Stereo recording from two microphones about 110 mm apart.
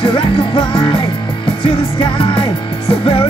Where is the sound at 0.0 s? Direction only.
50° left (ahead or behind).